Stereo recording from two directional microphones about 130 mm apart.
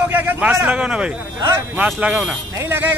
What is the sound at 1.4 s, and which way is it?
Speech, 25° right (ahead or behind).